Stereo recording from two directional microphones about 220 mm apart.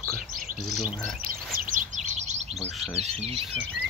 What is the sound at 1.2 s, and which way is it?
Chirp, 40° right (ahead or behind).